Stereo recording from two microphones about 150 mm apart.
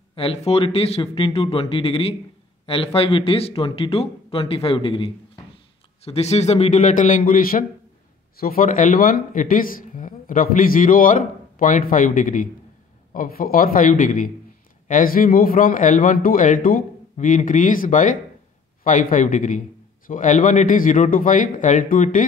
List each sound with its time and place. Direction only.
0.1 s a man's voice: 40° left (ahead or behind); by 22.2 s 60° left (ahead or behind)